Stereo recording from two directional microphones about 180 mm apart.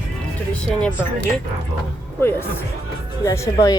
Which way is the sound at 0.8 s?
5° left (ahead or behind).